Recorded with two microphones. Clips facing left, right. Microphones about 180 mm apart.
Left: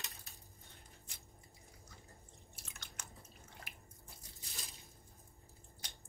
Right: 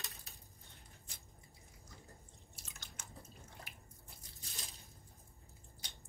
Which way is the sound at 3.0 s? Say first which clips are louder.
Left 2 dB; 60° left (ahead or behind).